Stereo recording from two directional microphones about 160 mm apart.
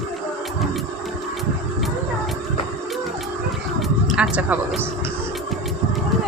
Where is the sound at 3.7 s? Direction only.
5° right (ahead or behind).